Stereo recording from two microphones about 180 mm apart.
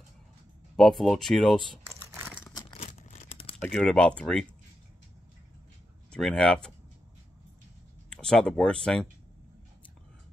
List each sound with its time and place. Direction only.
0.7 s speech: centre (ahead or behind)
2.2 s crumpling: 10° left (ahead or behind)
2.8 s a sound: 40° left (ahead or behind)
3.6 s speech: 5° left (ahead or behind)
6.1 s speech: 5° left (ahead or behind)
8.1 s speech: 5° left (ahead or behind)